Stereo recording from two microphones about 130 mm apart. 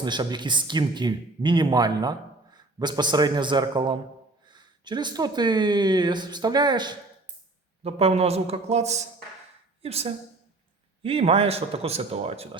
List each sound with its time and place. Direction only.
0.0 s speech: 35° right (ahead or behind)
7.9 s a man's voice: 50° right (ahead or behind)